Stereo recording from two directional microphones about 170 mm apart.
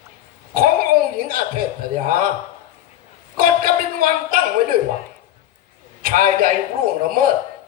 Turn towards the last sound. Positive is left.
turn(degrees=-55)  # may be behind; listen again after turning